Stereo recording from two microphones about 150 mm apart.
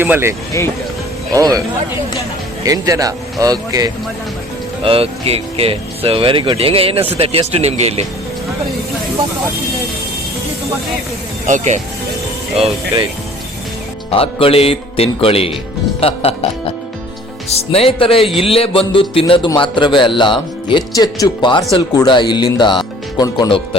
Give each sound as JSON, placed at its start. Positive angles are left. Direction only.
{"t": 0.0, "sound": "speech", "side_deg": -15}
{"t": 2.6, "sound": "speech", "side_deg": -20}
{"t": 4.8, "sound": "speech", "side_deg": -40}
{"t": 11.4, "sound": "speech", "side_deg": -55}
{"t": 12.5, "sound": "speech", "side_deg": -40}
{"t": 14.1, "sound": "speech", "side_deg": 40}